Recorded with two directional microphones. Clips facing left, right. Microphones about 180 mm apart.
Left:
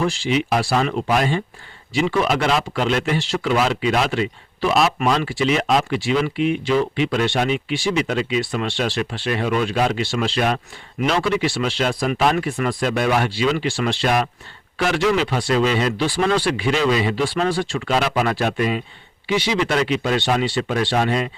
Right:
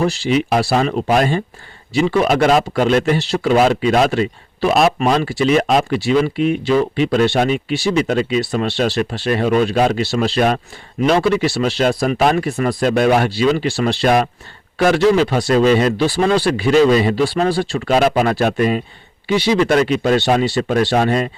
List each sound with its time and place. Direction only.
0.0 s speech: 40° right (ahead or behind)